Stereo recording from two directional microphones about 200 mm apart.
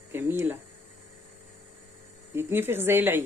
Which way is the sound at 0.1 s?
10° right (ahead or behind).